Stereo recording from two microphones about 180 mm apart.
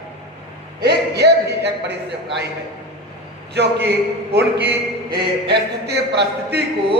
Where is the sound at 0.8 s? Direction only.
65° right (ahead or behind).